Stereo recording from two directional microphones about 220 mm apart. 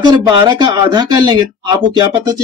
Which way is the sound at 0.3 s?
20° right (ahead or behind).